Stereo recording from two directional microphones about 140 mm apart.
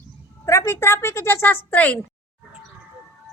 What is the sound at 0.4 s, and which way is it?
A woman's voice, 20° left (ahead or behind).